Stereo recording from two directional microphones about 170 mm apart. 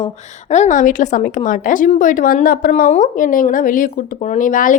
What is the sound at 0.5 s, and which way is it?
Speech, 45° left (ahead or behind).